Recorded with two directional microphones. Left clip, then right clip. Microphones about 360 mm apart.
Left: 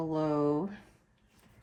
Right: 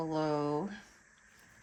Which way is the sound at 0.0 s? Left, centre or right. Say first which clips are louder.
Left 3 dB; centre.